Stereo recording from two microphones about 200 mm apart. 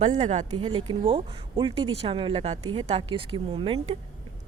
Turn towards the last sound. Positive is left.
turn(degrees=-25)  # may be behind; listen again after turning